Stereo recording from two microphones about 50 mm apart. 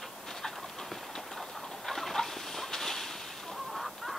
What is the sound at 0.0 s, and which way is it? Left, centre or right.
Clip-clop, centre.